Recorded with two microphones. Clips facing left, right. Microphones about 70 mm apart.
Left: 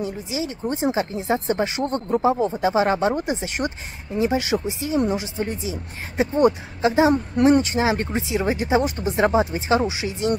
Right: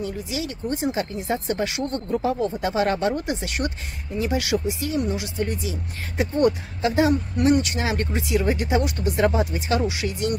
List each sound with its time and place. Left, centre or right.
0.0 s speech: left
7.3 s speech: left